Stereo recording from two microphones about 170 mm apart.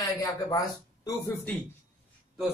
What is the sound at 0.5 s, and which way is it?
Speech, 20° left (ahead or behind).